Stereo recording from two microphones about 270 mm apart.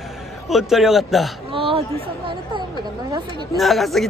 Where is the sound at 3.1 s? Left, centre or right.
Centre.